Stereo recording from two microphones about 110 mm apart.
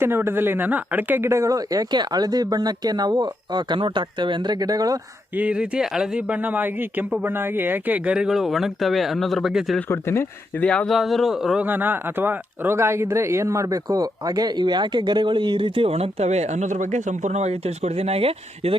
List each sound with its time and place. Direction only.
0.0 s speech: 20° right (ahead or behind)
5.4 s speech: 10° right (ahead or behind)
9.9 s speech: 25° left (ahead or behind)
10.7 s speech: 5° left (ahead or behind)
11.6 s speech: 15° right (ahead or behind); by 18.8 s 60° right (ahead or behind)